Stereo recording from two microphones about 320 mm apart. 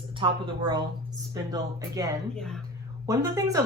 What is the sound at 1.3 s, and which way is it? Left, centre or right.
Speech, centre.